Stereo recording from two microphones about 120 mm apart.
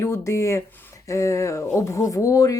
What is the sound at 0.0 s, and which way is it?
Speech, 20° left (ahead or behind).